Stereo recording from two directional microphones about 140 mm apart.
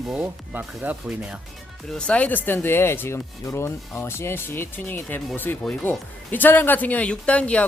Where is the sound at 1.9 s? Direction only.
10° left (ahead or behind).